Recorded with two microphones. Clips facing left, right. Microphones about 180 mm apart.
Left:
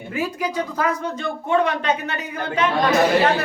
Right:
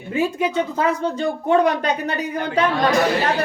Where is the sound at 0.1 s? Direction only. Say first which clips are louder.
Right 4 dB; 25° right (ahead or behind).